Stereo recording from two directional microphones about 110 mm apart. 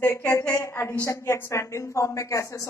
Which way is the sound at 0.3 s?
25° left (ahead or behind).